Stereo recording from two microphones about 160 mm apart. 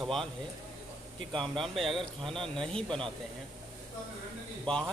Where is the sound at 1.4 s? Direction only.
Centre (ahead or behind).